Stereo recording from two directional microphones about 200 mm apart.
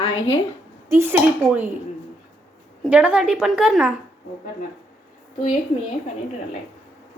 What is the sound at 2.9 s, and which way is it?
A woman's voice, 5° right (ahead or behind).